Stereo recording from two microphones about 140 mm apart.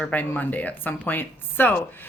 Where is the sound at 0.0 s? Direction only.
10° left (ahead or behind).